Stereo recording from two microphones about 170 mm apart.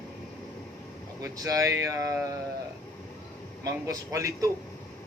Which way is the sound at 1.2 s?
20° right (ahead or behind).